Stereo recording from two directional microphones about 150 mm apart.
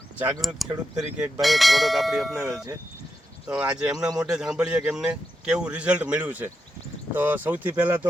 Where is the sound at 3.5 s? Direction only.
5° right (ahead or behind).